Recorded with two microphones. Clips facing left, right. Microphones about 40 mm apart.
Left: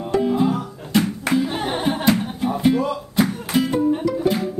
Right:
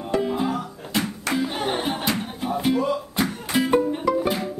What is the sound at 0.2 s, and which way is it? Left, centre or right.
Music, centre.